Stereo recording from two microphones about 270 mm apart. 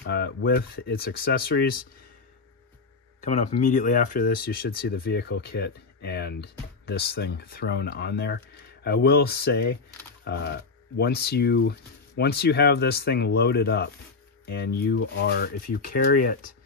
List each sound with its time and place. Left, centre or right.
0.0 s speech: left
3.2 s speech: left